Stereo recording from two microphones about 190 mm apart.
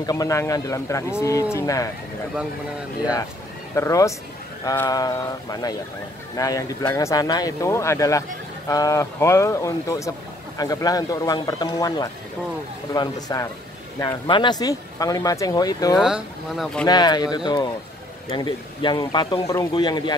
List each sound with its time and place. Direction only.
0.0 s speech: 20° left (ahead or behind)
3.7 s speech: 15° left (ahead or behind)
16.0 s speech: 5° right (ahead or behind)
16.8 s speech: 20° left (ahead or behind)